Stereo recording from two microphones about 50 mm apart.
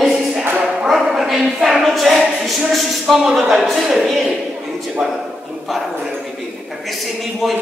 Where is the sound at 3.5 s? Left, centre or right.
Centre.